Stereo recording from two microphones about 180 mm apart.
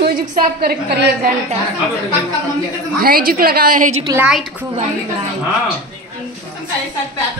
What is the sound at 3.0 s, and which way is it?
Speech, 55° right (ahead or behind).